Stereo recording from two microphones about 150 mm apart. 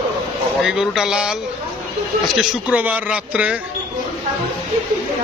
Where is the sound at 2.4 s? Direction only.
10° right (ahead or behind).